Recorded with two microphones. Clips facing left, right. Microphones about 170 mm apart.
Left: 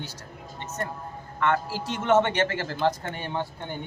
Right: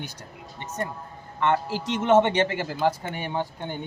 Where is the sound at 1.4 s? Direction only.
20° right (ahead or behind).